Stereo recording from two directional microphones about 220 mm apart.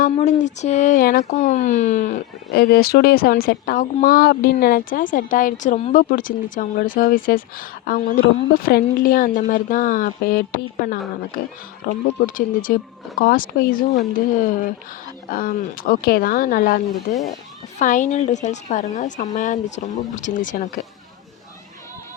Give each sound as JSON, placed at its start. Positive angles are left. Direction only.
{"t": 0.0, "sound": "speech", "side_deg": 35}